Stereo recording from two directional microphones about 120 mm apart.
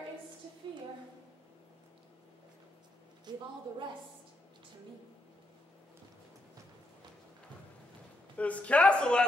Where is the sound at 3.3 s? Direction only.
35° right (ahead or behind).